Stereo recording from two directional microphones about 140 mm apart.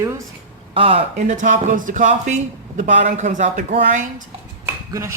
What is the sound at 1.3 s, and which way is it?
Speech, 65° right (ahead or behind).